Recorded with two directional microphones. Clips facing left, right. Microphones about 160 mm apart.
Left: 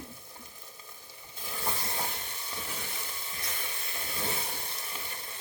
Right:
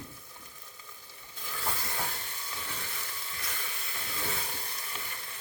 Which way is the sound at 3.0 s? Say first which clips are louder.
Left 1 dB; 20° left (ahead or behind).